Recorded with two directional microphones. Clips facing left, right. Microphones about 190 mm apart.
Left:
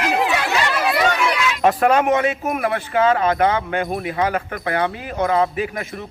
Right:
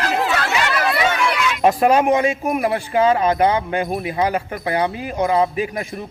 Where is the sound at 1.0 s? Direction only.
5° right (ahead or behind).